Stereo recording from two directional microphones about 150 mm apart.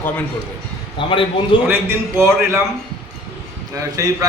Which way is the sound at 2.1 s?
15° right (ahead or behind).